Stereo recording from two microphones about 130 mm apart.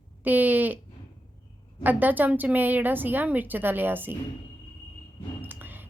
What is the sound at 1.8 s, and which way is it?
A woman's voice, 15° right (ahead or behind).